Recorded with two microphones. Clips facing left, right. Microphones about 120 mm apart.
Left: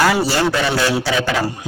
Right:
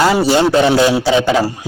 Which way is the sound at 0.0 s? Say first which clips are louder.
Right 4 dB; 20° right (ahead or behind).